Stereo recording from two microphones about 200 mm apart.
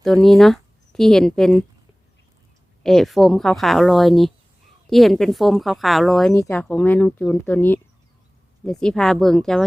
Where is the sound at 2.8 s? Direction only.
Centre (ahead or behind).